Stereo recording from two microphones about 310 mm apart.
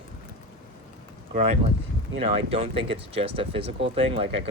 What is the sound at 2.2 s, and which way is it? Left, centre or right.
Speech, centre.